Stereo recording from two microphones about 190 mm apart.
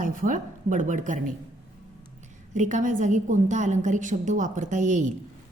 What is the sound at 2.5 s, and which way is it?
A woman's voice, 40° right (ahead or behind).